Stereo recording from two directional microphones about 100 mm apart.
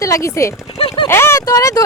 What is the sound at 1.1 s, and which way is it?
Speech, 25° left (ahead or behind).